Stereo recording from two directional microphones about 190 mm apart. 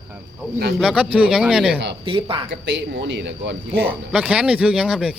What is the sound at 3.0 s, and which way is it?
Speech, 65° right (ahead or behind).